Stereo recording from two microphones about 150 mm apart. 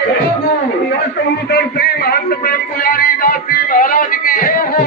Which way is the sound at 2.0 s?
80° left.